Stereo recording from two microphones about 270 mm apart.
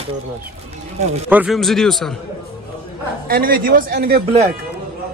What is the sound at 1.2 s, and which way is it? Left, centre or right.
Speech, centre.